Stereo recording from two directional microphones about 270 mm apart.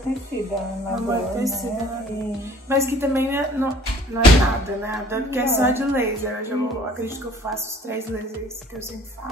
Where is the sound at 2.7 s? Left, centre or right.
Centre.